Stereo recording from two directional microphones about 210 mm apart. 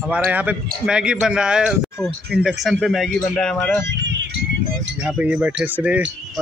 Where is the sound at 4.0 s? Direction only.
55° right (ahead or behind).